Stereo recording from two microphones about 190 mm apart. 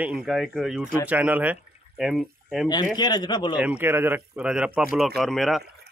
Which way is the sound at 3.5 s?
5° right (ahead or behind).